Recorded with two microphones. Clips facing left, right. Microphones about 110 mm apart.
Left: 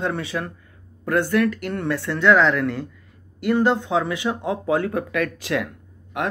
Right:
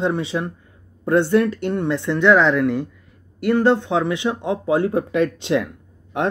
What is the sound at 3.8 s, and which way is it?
Speech, 20° right (ahead or behind).